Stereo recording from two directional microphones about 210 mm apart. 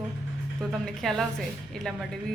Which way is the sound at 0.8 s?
Centre (ahead or behind).